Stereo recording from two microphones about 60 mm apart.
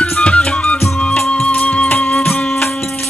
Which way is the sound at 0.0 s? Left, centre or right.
Centre.